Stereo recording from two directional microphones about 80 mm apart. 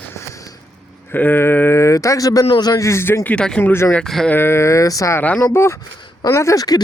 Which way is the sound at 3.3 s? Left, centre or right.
Centre.